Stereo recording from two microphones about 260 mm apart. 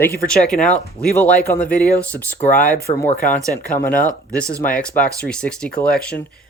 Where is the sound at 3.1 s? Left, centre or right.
Left.